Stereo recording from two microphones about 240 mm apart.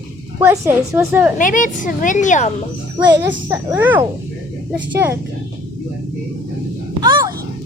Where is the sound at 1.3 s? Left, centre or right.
Left.